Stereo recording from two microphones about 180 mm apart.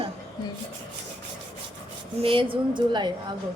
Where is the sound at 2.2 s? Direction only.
30° right (ahead or behind).